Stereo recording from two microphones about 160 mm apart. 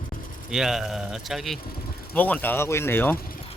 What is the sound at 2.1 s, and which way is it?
Speech, 10° left (ahead or behind).